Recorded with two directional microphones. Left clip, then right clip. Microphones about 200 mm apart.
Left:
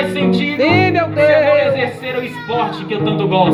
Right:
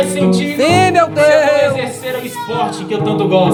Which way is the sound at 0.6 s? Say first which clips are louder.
Right 3 dB; 20° right (ahead or behind).